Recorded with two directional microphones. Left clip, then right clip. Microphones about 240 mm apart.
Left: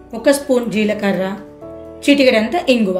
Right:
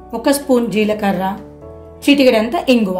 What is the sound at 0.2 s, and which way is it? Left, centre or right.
A woman's voice, right.